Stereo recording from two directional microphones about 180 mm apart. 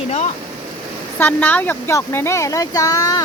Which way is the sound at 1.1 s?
10° left (ahead or behind).